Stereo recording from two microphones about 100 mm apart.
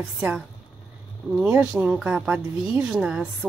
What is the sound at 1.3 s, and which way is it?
A woman's voice, 15° right (ahead or behind).